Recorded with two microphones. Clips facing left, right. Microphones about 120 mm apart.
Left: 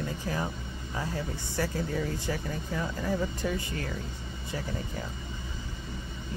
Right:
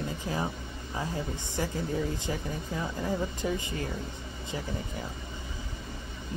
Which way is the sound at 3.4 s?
20° right (ahead or behind).